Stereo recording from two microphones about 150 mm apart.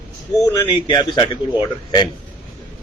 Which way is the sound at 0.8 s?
30° left (ahead or behind).